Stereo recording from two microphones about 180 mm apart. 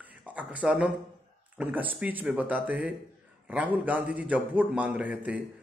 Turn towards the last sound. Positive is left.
turn(degrees=-10)  # may be behind; listen again after turning